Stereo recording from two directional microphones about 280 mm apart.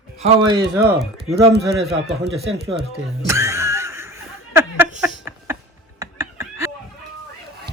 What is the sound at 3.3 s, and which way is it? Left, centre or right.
Snicker, centre.